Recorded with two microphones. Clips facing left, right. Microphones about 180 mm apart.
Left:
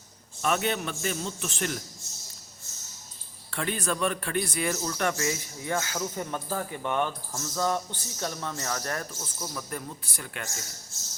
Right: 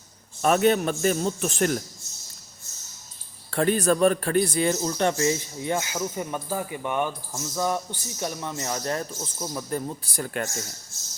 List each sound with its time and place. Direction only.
0.4 s a man's voice: 45° right (ahead or behind)
3.5 s a man's voice: 40° right (ahead or behind)